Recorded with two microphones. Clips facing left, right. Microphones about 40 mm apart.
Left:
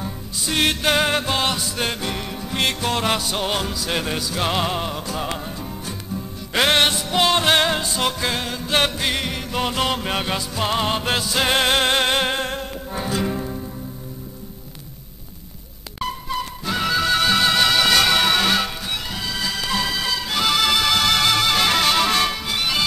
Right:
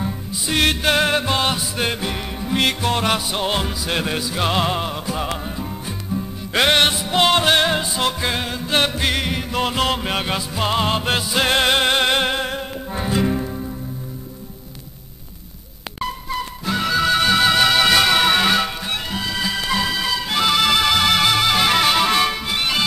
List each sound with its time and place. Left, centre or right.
0.0 s music: centre
16.6 s music: centre